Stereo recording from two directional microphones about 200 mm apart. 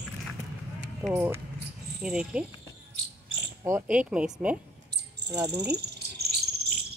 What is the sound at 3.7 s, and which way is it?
Speech, 10° right (ahead or behind).